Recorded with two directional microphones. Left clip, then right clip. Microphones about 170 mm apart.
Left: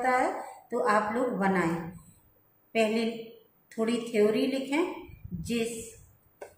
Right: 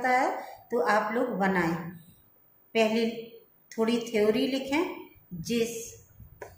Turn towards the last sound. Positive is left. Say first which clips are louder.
# right 3 dB
turn(degrees=-20)  # may be behind; listen again after turning